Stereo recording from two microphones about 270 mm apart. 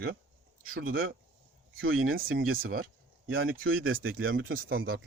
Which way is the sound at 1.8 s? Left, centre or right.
Right.